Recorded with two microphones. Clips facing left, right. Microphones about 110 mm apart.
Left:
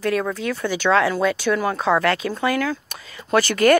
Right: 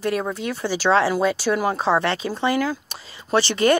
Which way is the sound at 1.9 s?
25° right (ahead or behind).